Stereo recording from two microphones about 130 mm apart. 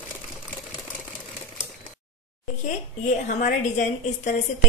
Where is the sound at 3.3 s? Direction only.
70° left (ahead or behind).